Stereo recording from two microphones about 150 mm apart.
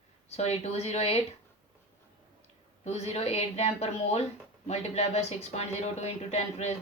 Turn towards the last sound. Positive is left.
turn(degrees=45)  # may be behind; listen again after turning